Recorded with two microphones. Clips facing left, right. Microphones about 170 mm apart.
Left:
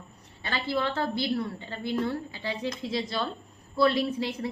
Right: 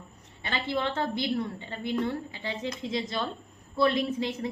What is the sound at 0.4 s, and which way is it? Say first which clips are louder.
A woman's voice: left 1 dB; 20° right (ahead or behind).